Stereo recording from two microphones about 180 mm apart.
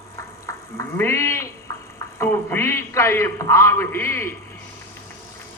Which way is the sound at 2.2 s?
10° left (ahead or behind).